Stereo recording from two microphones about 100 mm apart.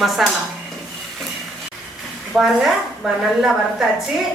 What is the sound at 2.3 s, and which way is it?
Speech, 5° right (ahead or behind).